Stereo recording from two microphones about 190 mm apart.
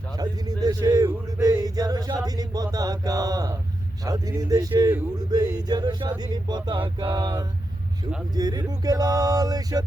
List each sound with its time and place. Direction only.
0.2 s male singing: 20° right (ahead or behind)
4.0 s speech: 20° right (ahead or behind)